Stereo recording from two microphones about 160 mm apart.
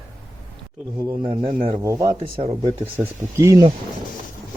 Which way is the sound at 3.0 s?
20° right (ahead or behind).